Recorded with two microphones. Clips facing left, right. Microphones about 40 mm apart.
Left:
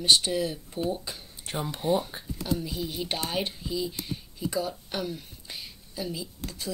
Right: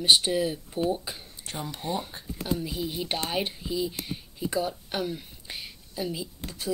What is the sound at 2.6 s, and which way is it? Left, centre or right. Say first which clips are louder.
Speech: right 1 dB; centre.